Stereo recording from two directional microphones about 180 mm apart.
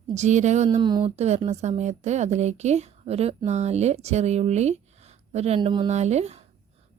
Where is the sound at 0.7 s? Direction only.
25° right (ahead or behind).